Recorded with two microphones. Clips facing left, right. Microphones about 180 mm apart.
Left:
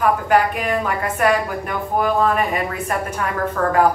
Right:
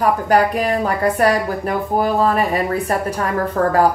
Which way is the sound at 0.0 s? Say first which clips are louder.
Right 1 dB; 35° right (ahead or behind).